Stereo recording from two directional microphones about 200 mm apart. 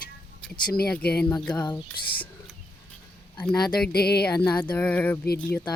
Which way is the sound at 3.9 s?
50° left (ahead or behind).